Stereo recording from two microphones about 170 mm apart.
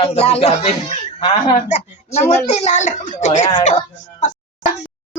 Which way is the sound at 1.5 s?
45° left (ahead or behind).